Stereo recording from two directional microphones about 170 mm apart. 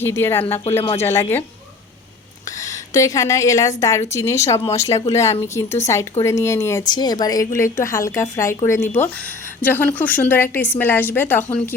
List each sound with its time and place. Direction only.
0.0 s a woman's voice: 15° left (ahead or behind)
2.6 s a woman's voice: 20° left (ahead or behind)